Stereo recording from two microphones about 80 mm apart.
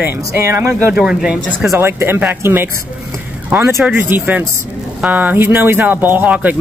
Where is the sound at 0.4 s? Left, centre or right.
Right.